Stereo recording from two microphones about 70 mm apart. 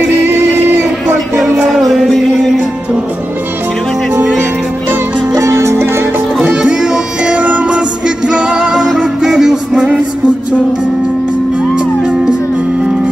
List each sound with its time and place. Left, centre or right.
0.3 s music: right
1.6 s music: centre
5.3 s music: right
6.5 s music: centre
11.7 s music: centre